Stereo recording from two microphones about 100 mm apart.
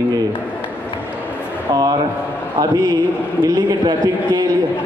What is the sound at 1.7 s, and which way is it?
A man's voice, 40° right (ahead or behind).